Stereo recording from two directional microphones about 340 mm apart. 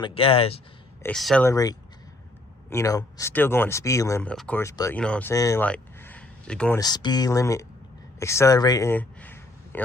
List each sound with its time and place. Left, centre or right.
0.0 s speech: centre
1.0 s speech: centre